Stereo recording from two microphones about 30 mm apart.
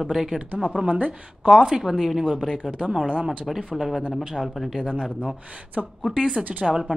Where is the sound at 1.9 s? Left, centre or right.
Centre.